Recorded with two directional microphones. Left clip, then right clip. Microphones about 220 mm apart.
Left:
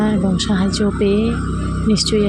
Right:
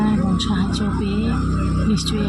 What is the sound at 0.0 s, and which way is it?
Music, 25° left (ahead or behind).